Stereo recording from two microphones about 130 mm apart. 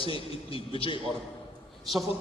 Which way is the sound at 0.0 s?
45° left (ahead or behind).